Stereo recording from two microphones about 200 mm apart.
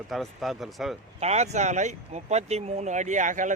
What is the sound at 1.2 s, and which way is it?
Speech, 35° right (ahead or behind).